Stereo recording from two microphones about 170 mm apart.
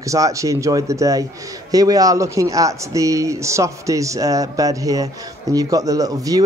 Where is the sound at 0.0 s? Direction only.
20° right (ahead or behind).